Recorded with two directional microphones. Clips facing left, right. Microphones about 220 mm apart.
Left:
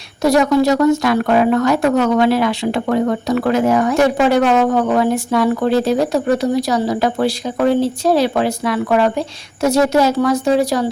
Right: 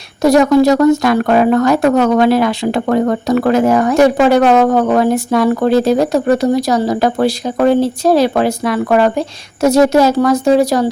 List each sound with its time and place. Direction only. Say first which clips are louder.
0.2 s speech: right 4 dB; 45° right (ahead or behind)